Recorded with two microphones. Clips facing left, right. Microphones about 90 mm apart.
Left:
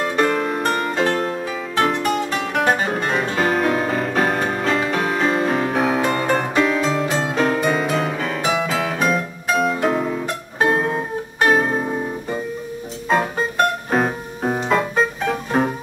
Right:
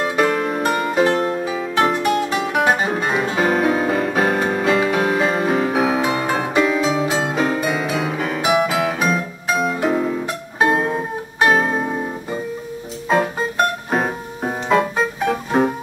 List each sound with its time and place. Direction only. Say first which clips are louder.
0.0 s music: right 1 dB; 5° right (ahead or behind)
13.1 s music: right 1 dB; centre (ahead or behind)